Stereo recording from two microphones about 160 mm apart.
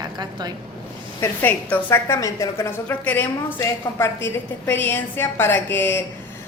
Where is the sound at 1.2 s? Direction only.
10° left (ahead or behind).